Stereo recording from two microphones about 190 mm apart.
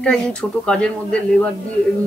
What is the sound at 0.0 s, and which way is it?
A woman's voice, 5° left (ahead or behind).